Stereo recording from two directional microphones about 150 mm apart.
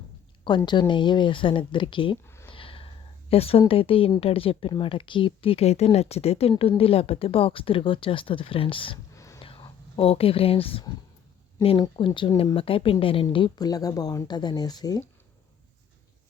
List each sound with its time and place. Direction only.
0.4 s speech: 30° left (ahead or behind)
2.2 s a sound: 15° left (ahead or behind)
2.5 s a sound: 35° left (ahead or behind)
3.7 s speech: 40° left (ahead or behind)
9.1 s whispering: 20° left (ahead or behind)
9.4 s whispering: 35° left (ahead or behind)
11.6 s speech: 35° left (ahead or behind)